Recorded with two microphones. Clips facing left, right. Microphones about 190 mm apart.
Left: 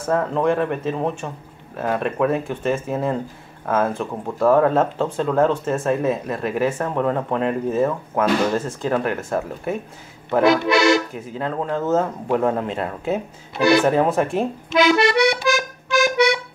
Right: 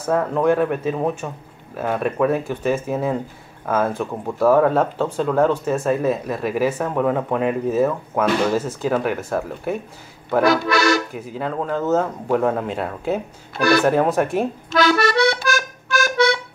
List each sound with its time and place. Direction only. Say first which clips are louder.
0.0 s speech: right 1 dB; centre (ahead or behind)
10.4 s speech: left 2 dB; 20° left (ahead or behind)
11.1 s speech: even; centre (ahead or behind)
13.6 s speech: left 1 dB; 20° left (ahead or behind)
13.8 s speech: even; centre (ahead or behind)
14.8 s accordion: left 1 dB; 20° left (ahead or behind)